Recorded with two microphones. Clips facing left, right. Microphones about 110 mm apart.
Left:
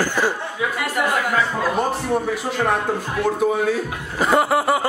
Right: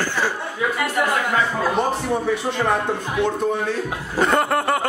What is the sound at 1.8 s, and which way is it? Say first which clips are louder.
Speech: even; centre (ahead or behind).